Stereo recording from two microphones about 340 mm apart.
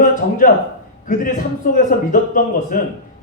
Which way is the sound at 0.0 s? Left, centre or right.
Left.